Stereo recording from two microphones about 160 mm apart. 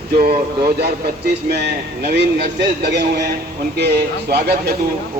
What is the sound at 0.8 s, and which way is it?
A man's voice, 75° right (ahead or behind).